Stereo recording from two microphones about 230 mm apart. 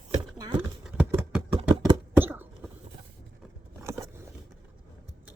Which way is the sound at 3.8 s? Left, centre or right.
Centre.